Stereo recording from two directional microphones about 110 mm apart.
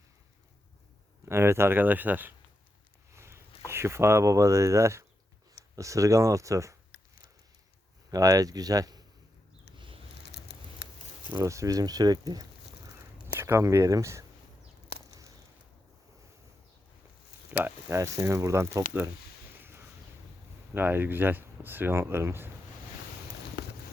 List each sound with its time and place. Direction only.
1.2 s speech: 25° right (ahead or behind)
3.1 s a sound: 25° right (ahead or behind)
3.7 s speech: 25° right (ahead or behind)
8.1 s speech: 30° right (ahead or behind)
9.7 s a sound: 50° right (ahead or behind)
11.3 s speech: 30° right (ahead or behind)
13.2 s speech: 20° right (ahead or behind)
17.6 s speech: 25° right (ahead or behind)
20.7 s speech: 20° right (ahead or behind)